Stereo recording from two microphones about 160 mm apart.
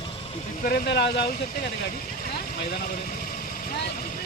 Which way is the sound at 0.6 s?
85° left.